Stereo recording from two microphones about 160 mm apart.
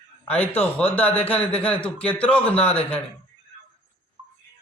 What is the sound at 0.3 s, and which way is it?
A man's voice, 10° left (ahead or behind).